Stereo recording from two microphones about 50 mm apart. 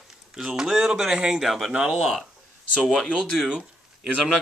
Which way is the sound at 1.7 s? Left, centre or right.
Right.